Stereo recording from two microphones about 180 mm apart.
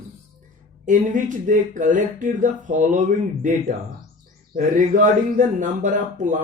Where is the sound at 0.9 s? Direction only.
45° right (ahead or behind).